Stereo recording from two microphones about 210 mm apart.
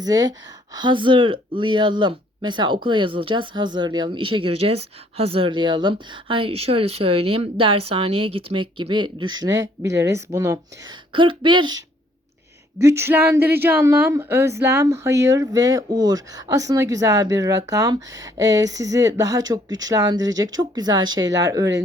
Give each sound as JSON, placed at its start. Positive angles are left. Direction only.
{"t": 0.0, "sound": "speech", "side_deg": -20}
{"t": 12.8, "sound": "speech", "side_deg": -10}
{"t": 21.2, "sound": "speech", "side_deg": -60}